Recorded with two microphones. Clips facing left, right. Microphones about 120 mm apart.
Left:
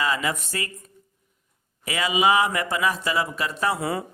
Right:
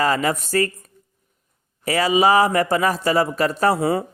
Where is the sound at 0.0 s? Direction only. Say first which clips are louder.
Right 6 dB; 45° right (ahead or behind).